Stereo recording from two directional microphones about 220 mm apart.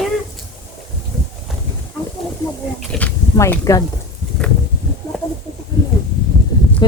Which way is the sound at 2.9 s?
5° left (ahead or behind).